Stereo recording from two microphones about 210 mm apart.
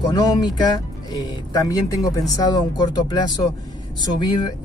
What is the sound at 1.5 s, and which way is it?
Speech, 15° left (ahead or behind).